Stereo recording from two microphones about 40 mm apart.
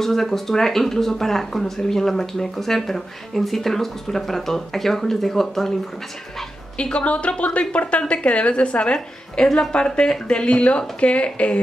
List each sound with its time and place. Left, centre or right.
0.0 s speech: centre
6.8 s speech: left